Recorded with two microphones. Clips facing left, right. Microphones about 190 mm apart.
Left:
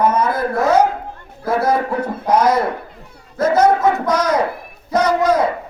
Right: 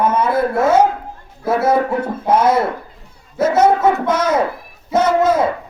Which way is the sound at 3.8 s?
25° right (ahead or behind).